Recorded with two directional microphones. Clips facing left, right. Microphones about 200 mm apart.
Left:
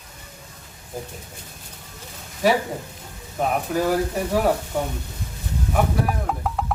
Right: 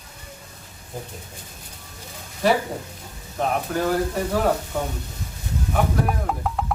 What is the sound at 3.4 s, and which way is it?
Speech, 5° left (ahead or behind).